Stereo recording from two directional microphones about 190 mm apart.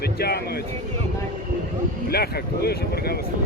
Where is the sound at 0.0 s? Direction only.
55° left (ahead or behind).